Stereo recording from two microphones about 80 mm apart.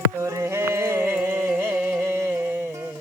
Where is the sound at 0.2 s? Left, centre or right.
Right.